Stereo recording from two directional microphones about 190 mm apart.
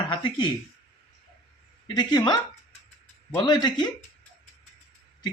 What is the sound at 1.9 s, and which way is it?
Speech, 20° left (ahead or behind).